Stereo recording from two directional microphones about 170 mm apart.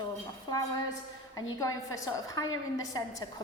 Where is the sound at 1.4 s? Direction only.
20° left (ahead or behind).